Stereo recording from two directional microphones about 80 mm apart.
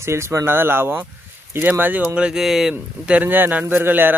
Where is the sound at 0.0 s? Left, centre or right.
Right; by 3.2 s centre.